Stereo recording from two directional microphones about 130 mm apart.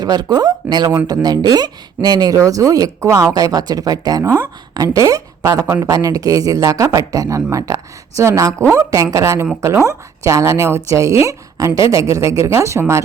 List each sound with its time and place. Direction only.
0.0 s speech: 30° right (ahead or behind)
11.8 s speech: 45° left (ahead or behind)
12.1 s speech: 25° right (ahead or behind)